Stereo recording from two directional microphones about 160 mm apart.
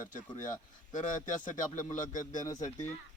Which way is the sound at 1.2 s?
55° left (ahead or behind).